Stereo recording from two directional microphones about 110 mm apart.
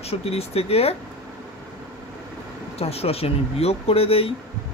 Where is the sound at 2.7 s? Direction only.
65° left (ahead or behind).